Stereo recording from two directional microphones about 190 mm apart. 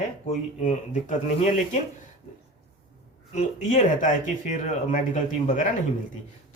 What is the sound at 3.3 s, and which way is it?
Speech, 40° left (ahead or behind).